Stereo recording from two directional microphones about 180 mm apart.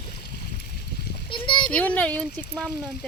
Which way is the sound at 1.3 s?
25° left (ahead or behind).